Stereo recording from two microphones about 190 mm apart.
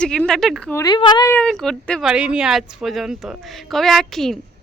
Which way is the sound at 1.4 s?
5° left (ahead or behind).